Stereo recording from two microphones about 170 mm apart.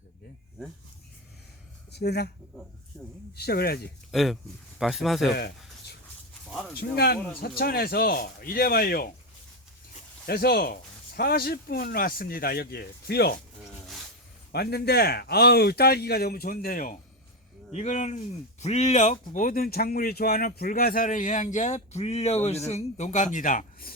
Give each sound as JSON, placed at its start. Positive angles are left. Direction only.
{"t": 1.9, "sound": "speech", "side_deg": 70}
{"t": 2.9, "sound": "speech", "side_deg": 0}
{"t": 3.3, "sound": "speech", "side_deg": 70}
{"t": 4.1, "sound": "speech", "side_deg": 0}
{"t": 5.3, "sound": "a sound", "side_deg": 75}
{"t": 6.7, "sound": "speech", "side_deg": 70}
{"t": 10.2, "sound": "speech", "side_deg": 65}
{"t": 14.5, "sound": "speech", "side_deg": 70}
{"t": 17.7, "sound": "speech", "side_deg": 40}